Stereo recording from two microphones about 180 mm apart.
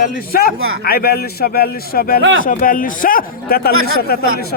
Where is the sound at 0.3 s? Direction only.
60° left (ahead or behind).